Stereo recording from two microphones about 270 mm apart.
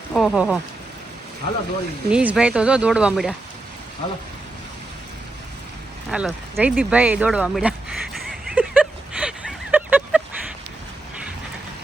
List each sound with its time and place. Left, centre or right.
0.1 s speech: centre
2.0 s speech: centre
6.1 s a sound: centre